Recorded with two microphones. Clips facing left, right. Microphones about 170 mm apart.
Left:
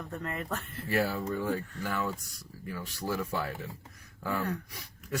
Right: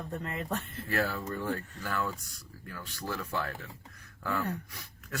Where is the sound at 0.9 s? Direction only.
10° left (ahead or behind).